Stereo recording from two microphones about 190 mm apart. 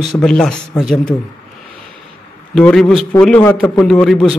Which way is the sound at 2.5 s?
5° left (ahead or behind).